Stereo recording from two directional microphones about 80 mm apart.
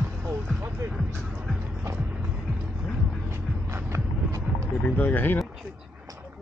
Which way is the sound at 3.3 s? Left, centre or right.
Right.